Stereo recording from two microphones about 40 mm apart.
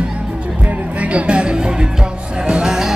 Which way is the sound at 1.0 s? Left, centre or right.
Right.